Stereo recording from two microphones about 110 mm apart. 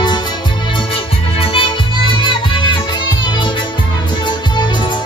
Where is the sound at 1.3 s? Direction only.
50° left (ahead or behind).